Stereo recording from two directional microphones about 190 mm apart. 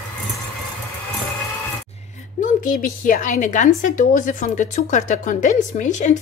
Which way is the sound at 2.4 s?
45° left (ahead or behind).